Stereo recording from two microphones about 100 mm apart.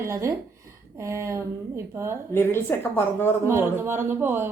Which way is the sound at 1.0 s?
30° right (ahead or behind).